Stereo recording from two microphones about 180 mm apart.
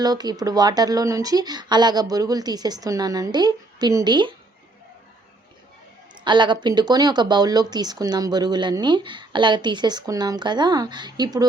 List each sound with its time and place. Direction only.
0.0 s speech: 20° right (ahead or behind)
6.2 s speech: 25° right (ahead or behind)